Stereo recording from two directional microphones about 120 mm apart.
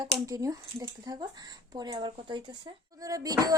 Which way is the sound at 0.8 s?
40° right (ahead or behind).